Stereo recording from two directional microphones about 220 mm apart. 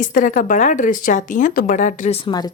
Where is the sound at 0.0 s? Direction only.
35° left (ahead or behind).